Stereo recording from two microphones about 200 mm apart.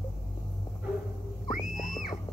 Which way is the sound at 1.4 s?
40° left (ahead or behind).